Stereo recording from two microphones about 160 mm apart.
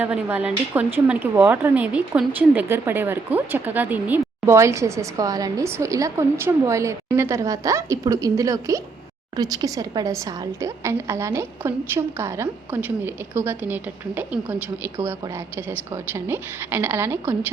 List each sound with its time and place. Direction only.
0.0 s a woman's voice: 10° right (ahead or behind)
16.3 s speech: 15° right (ahead or behind)